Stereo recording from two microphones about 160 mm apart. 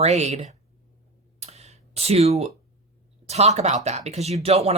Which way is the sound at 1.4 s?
40° right (ahead or behind).